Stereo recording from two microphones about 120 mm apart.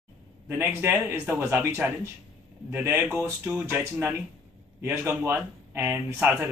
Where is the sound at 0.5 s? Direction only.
20° right (ahead or behind).